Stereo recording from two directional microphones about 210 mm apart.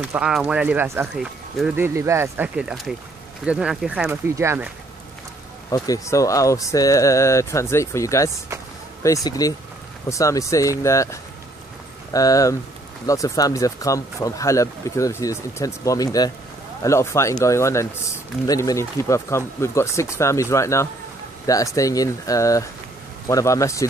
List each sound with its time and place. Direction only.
0.0 s speech: 5° right (ahead or behind)
5.7 s speech: 15° left (ahead or behind)